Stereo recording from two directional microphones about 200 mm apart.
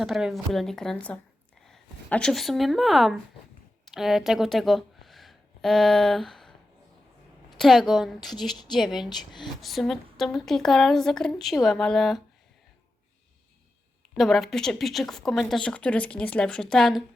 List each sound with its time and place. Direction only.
0.0 s speech: centre (ahead or behind)
7.6 s speech: centre (ahead or behind)
9.0 s speech: 20° left (ahead or behind)
9.6 s speech: centre (ahead or behind)
14.2 s speech: centre (ahead or behind)